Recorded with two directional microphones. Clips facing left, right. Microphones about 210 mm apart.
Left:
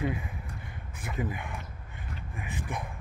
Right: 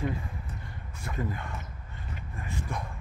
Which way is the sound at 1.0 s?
15° left (ahead or behind).